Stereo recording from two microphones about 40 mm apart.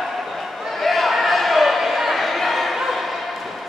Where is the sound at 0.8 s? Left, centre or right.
Centre.